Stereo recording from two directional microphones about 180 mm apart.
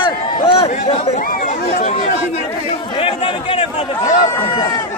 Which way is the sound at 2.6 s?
30° left (ahead or behind).